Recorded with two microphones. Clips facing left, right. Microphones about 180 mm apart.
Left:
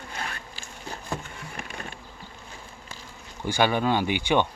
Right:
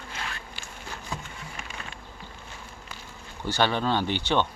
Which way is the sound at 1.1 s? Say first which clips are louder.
Left 4 dB; 55° left (ahead or behind).